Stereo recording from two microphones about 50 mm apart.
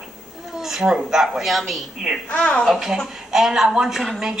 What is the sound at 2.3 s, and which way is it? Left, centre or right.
Speech, left.